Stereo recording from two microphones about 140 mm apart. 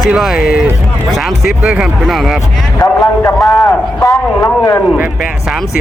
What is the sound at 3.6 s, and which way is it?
A man's voice, 20° left (ahead or behind).